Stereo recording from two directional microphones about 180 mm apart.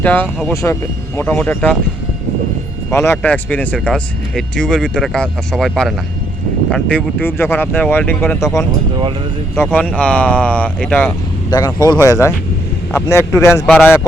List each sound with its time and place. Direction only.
0.0 s speech: 10° left (ahead or behind)
2.9 s speech: 15° left (ahead or behind)
9.6 s speech: 15° left (ahead or behind)
11.5 s speech: 20° left (ahead or behind)